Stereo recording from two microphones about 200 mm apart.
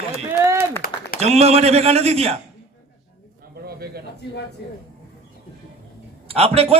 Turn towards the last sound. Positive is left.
turn(degrees=-30)  # may be behind; listen again after turning